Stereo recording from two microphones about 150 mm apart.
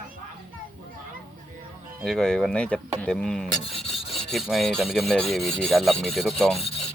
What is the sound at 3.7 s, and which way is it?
Rub, 40° left (ahead or behind).